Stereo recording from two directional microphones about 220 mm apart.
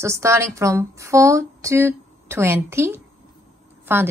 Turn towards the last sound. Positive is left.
turn(degrees=-10)  # may be behind; listen again after turning